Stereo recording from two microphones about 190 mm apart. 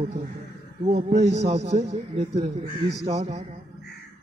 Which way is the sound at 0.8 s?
35° right (ahead or behind).